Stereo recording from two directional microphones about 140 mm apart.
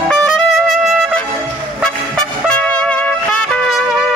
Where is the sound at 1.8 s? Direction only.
5° left (ahead or behind).